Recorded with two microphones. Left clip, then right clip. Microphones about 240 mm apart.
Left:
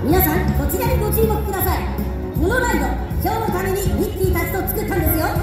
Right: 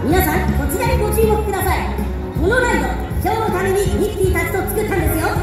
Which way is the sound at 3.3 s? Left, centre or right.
Left.